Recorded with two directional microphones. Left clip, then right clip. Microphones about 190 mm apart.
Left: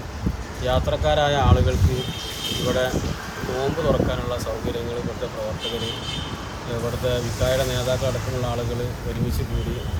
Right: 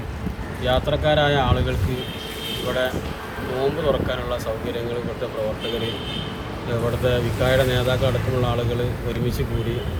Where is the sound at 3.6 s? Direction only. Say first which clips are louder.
Right 1 dB; 30° left (ahead or behind).